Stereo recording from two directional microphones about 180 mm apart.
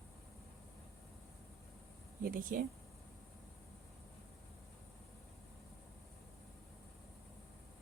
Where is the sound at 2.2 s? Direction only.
50° right (ahead or behind).